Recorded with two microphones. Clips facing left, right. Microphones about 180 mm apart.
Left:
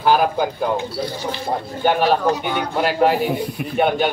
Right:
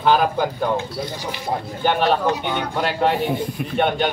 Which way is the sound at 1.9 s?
5° left (ahead or behind).